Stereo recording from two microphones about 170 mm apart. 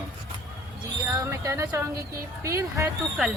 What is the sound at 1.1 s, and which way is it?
Speech, 20° right (ahead or behind).